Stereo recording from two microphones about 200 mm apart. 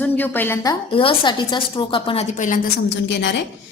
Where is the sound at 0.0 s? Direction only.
10° left (ahead or behind); by 2.2 s 25° left (ahead or behind).